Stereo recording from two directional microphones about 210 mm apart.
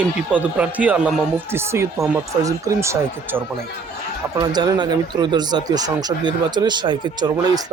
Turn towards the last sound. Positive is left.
turn(degrees=-20)  # may be behind; listen again after turning